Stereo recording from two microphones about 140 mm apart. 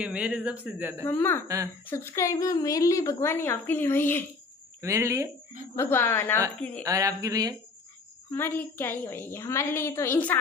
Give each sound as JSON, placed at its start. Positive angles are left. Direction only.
{"t": 0.0, "sound": "speech", "side_deg": -10}
{"t": 1.0, "sound": "a woman's voice", "side_deg": 15}
{"t": 4.8, "sound": "speech", "side_deg": -20}
{"t": 5.8, "sound": "a woman's voice", "side_deg": 15}
{"t": 6.8, "sound": "speech", "side_deg": -25}
{"t": 8.3, "sound": "a woman's voice", "side_deg": 15}